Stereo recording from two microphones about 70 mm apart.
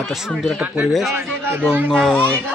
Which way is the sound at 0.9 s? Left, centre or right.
Centre.